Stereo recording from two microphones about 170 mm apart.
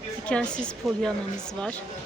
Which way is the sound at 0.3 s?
5° left (ahead or behind).